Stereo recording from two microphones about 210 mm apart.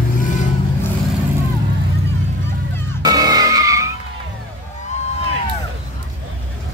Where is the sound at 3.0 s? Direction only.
15° right (ahead or behind).